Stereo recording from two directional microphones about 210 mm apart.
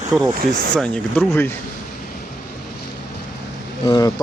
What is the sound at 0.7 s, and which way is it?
Speech, 5° left (ahead or behind).